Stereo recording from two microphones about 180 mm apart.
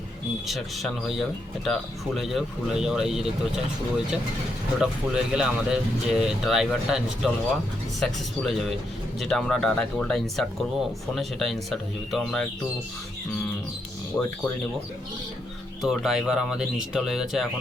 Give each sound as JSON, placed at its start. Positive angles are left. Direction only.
{"t": 0.4, "sound": "speech", "side_deg": 0}
{"t": 15.8, "sound": "speech", "side_deg": 0}